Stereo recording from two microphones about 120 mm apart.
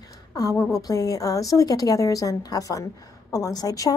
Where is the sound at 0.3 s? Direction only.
25° left (ahead or behind).